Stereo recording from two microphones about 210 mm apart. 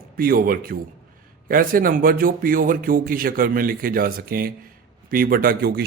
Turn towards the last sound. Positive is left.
turn(degrees=-45)  # may be behind; listen again after turning